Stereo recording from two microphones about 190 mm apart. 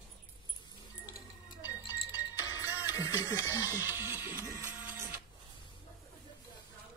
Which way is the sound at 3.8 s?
10° right (ahead or behind).